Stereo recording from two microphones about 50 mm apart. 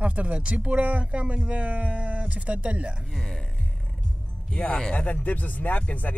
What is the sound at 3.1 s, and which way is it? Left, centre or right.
Speech, centre.